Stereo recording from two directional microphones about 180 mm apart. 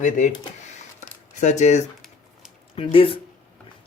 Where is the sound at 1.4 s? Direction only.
40° left (ahead or behind).